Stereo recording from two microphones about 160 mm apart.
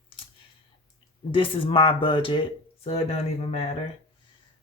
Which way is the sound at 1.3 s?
35° left (ahead or behind).